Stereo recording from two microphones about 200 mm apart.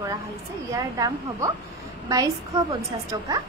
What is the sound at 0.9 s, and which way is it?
Speech, 15° right (ahead or behind).